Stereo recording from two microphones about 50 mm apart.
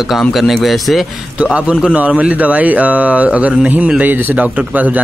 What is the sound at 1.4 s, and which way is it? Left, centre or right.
A man's voice, right.